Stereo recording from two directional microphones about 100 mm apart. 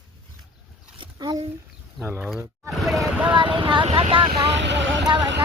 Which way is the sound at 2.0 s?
Centre (ahead or behind).